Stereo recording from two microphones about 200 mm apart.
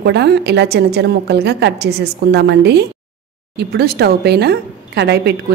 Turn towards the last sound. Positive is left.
turn(degrees=-55)  # may be behind; listen again after turning